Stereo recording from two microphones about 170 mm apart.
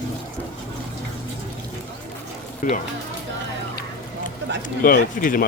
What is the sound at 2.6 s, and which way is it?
Speech, 50° left (ahead or behind).